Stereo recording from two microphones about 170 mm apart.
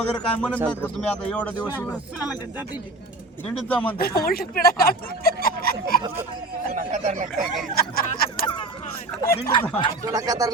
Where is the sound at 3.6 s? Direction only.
10° left (ahead or behind).